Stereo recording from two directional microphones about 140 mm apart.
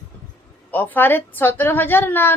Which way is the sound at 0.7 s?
15° left (ahead or behind).